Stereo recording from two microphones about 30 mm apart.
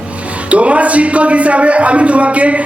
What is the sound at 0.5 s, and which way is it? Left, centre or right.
Speech, right.